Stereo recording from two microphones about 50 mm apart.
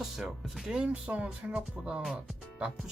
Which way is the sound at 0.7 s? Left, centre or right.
Centre.